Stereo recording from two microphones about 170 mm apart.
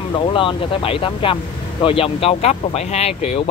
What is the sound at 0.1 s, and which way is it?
Speech, 30° left (ahead or behind).